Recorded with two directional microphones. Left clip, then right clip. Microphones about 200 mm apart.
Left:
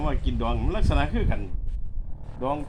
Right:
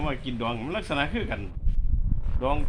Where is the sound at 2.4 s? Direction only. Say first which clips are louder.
Right 1 dB; centre (ahead or behind).